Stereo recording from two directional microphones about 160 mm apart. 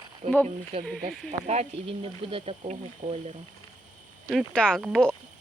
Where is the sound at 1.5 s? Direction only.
40° right (ahead or behind).